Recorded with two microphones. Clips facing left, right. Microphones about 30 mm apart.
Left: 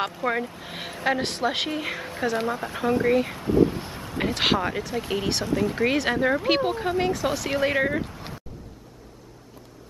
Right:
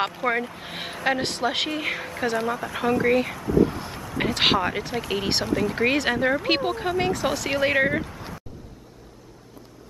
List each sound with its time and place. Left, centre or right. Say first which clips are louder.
0.0 s speech: right 2 dB; centre
2.4 s speech: right 1 dB; centre
3.0 s speech: even; centre
3.3 s speech: even; left
3.6 s vehicle: left 2 dB; centre
4.4 s speech: right 2 dB; centre